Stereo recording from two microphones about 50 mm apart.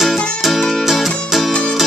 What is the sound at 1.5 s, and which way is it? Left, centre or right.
Music, centre.